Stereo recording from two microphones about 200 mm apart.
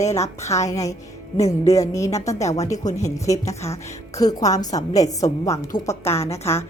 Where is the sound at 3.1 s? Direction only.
15° left (ahead or behind).